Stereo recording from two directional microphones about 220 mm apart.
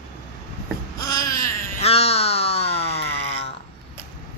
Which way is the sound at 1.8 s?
25° left (ahead or behind).